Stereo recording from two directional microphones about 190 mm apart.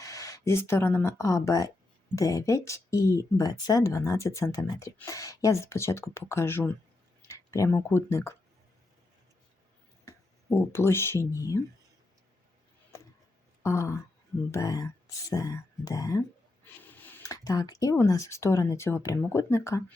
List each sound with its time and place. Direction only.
0.0 s speech: 15° left (ahead or behind)
10.1 s speech: 10° left (ahead or behind)
13.6 s a sound: 15° left (ahead or behind)
14.5 s speech: 20° left (ahead or behind)